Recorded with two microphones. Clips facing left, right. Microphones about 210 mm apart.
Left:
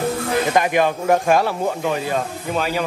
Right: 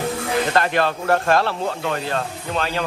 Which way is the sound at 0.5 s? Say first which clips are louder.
Left 3 dB; 10° left (ahead or behind).